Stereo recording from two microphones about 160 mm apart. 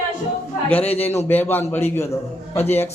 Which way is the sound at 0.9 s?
40° left (ahead or behind).